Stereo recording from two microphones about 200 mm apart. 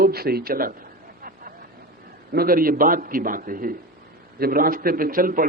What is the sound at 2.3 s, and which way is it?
A man's voice, 45° right (ahead or behind).